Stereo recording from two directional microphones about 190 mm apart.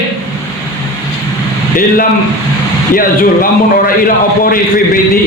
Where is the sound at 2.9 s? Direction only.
50° left (ahead or behind).